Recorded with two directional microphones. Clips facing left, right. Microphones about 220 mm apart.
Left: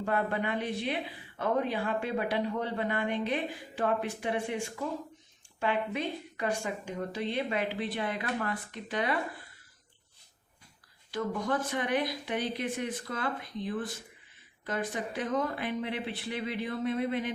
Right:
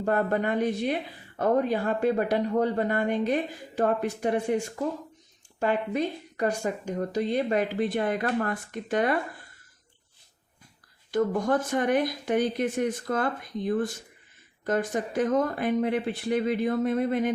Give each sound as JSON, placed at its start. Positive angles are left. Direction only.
{"t": 0.0, "sound": "a woman's voice", "side_deg": -45}
{"t": 11.1, "sound": "a woman's voice", "side_deg": -45}